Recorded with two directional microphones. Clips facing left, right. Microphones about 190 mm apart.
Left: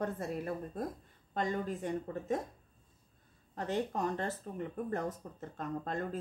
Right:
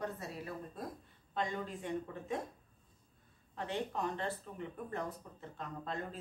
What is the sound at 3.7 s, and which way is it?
Speech, 45° left (ahead or behind).